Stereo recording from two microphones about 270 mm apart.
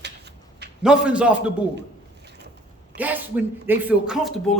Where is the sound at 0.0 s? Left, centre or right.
Right.